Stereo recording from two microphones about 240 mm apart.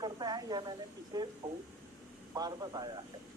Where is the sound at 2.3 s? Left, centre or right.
Centre.